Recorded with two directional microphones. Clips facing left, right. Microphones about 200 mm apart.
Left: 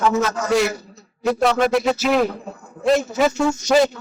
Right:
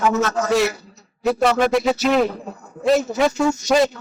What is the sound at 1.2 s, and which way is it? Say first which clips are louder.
A man's voice: even; centre (ahead or behind).